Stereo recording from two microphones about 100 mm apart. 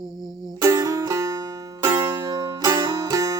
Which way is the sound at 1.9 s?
50° right (ahead or behind).